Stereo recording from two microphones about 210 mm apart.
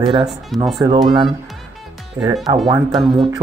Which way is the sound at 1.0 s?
20° right (ahead or behind).